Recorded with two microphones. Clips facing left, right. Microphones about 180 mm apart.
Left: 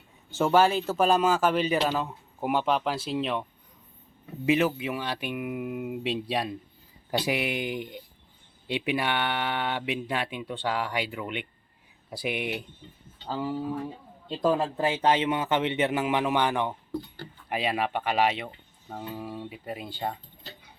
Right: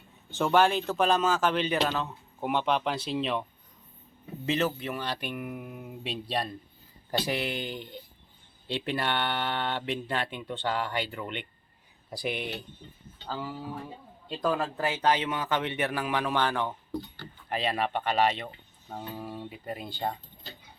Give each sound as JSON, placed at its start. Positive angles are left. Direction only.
{"t": 0.3, "sound": "speech", "side_deg": 5}
{"t": 4.4, "sound": "speech", "side_deg": 10}
{"t": 14.3, "sound": "speech", "side_deg": 25}